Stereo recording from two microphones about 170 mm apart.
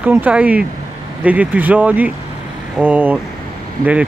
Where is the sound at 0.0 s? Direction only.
10° right (ahead or behind).